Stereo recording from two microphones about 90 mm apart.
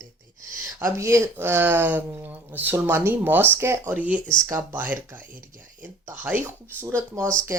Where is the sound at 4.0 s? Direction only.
15° right (ahead or behind).